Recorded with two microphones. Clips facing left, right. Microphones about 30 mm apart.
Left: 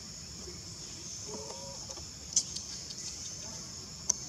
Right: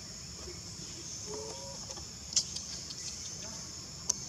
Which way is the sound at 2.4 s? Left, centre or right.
Right.